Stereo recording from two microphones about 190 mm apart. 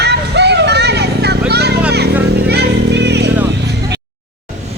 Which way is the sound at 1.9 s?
60° right (ahead or behind).